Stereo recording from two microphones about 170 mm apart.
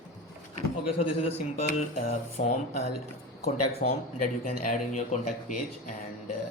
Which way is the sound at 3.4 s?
55° left (ahead or behind).